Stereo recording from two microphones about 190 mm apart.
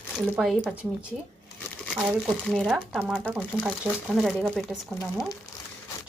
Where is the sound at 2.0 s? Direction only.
Centre (ahead or behind).